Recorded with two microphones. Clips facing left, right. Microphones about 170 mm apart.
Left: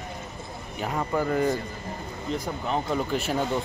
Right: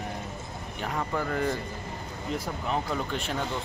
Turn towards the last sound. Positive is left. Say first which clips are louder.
# left 5 dB
turn(degrees=5)  # may be behind; listen again after turning